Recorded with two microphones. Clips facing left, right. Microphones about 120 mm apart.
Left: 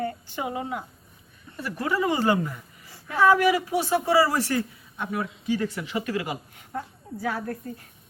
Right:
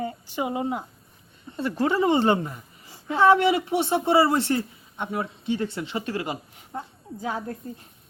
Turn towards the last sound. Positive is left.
turn(degrees=-20)  # may be behind; listen again after turning